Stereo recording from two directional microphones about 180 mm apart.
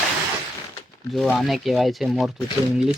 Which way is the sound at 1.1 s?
Centre (ahead or behind).